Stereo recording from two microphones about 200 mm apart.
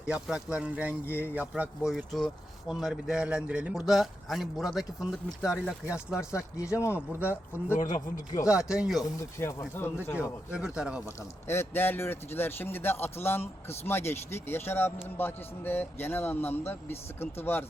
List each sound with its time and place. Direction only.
0.0 s speech: 5° right (ahead or behind)
6.1 s speech: 15° left (ahead or behind)
7.8 s speech: 40° left (ahead or behind)
8.4 s speech: 5° right (ahead or behind)
9.1 s speech: 15° left (ahead or behind)
10.5 s speech: 5° right (ahead or behind)
11.4 s speech: 10° left (ahead or behind)